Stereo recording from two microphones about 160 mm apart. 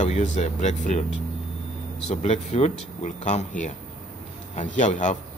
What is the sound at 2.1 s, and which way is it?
Speech, 45° left (ahead or behind).